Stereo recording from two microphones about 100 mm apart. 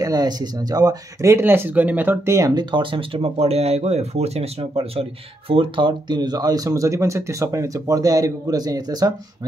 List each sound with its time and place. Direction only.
0.0 s speech: 40° right (ahead or behind)
2.5 s speech: 55° right (ahead or behind); by 5.0 s 85° right
5.5 s speech: 60° right (ahead or behind); by 9.5 s 40° right (ahead or behind)